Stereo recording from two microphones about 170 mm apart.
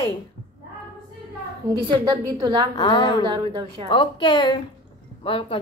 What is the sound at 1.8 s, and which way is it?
Speech, 25° right (ahead or behind).